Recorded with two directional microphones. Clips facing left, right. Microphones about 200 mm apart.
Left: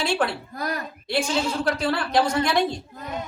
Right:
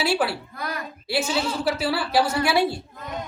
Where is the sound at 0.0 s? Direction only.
5° right (ahead or behind).